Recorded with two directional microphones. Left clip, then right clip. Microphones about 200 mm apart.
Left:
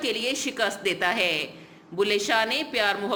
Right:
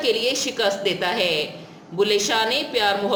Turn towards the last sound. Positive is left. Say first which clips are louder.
# right 4 dB
turn(degrees=30)  # may be behind; listen again after turning